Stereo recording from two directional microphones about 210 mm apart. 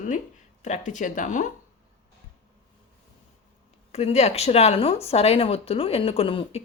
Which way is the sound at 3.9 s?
30° left (ahead or behind).